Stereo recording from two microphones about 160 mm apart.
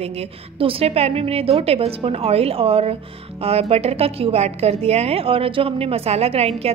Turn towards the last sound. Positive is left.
turn(degrees=-40)  # may be behind; listen again after turning